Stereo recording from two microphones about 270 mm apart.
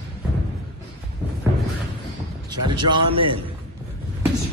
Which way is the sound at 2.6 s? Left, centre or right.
Centre.